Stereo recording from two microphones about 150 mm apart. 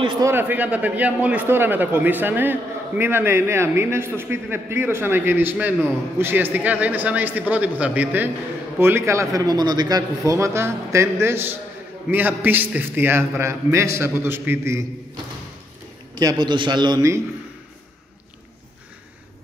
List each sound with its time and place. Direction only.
0.0 s a man's voice: 30° right (ahead or behind)
0.3 s a man's voice: 15° right (ahead or behind)
16.2 s a man's voice: 25° right (ahead or behind)